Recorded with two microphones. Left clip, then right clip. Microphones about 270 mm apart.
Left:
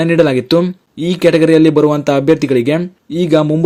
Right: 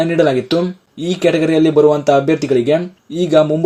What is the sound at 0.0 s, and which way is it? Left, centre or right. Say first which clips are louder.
Speech: left 2 dB; left.